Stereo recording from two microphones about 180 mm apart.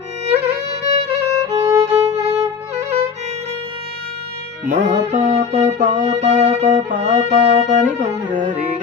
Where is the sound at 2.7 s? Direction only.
35° right (ahead or behind).